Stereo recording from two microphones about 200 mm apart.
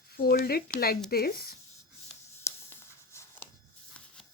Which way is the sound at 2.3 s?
15° left (ahead or behind).